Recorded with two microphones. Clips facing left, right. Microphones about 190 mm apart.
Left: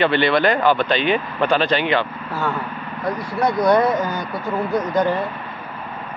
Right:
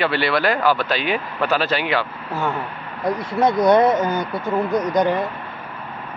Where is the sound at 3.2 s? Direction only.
20° right (ahead or behind).